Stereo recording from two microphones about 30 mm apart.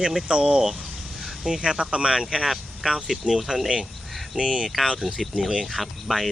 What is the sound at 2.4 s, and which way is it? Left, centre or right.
Speech, centre.